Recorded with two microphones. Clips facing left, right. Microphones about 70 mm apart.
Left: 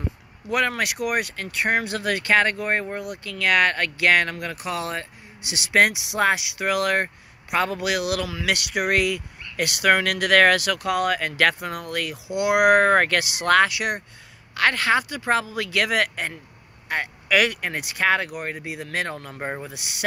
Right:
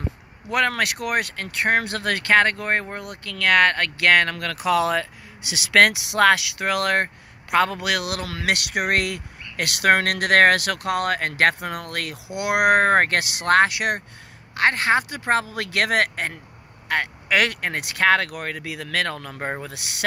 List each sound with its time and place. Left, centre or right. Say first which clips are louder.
0.7 s speech: right 1 dB; right
4.6 s speech: right 10 dB; right
5.8 s speech: right 3 dB; right
6.6 s speech: right 1 dB; right
8.9 s speech: left 1 dB; right
11.9 s speech: left 2 dB; right
12.4 s speech: left 1 dB; right